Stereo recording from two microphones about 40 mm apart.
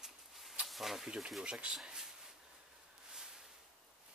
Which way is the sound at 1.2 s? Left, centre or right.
Centre.